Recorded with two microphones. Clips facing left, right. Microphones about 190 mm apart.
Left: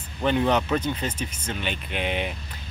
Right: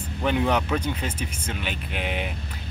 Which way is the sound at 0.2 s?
5° right (ahead or behind).